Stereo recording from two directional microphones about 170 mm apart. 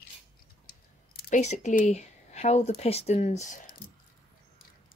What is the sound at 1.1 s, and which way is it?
Speech, 45° left (ahead or behind).